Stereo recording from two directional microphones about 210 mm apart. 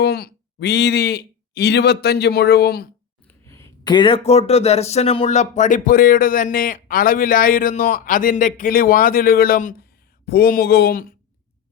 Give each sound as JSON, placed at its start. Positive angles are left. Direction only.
{"t": 0.0, "sound": "speech", "side_deg": 50}
{"t": 3.4, "sound": "speech", "side_deg": 15}